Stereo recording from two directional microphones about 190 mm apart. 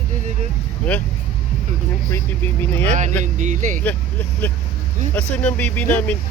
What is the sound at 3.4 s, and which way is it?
Speech, 40° right (ahead or behind).